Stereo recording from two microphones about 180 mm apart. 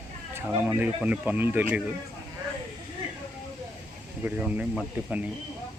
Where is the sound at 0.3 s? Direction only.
10° right (ahead or behind).